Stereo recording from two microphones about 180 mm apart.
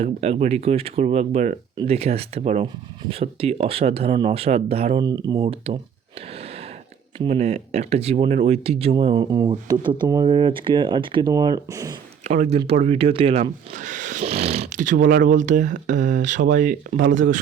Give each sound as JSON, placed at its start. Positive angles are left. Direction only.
{"t": 0.0, "sound": "speech", "side_deg": -35}
{"t": 5.0, "sound": "speech", "side_deg": -20}
{"t": 5.4, "sound": "speech", "side_deg": -35}
{"t": 7.2, "sound": "speech", "side_deg": -35}
{"t": 12.2, "sound": "speech", "side_deg": -40}